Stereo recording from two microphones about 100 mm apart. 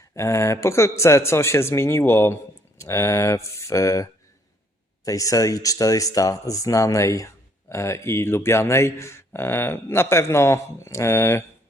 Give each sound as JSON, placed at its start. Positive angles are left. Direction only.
{"t": 0.1, "sound": "speech", "side_deg": 30}